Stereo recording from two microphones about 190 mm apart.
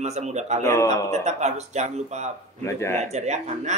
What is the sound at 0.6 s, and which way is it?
Speech, 15° left (ahead or behind).